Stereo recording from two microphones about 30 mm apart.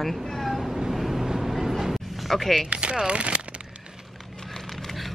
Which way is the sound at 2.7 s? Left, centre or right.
Right.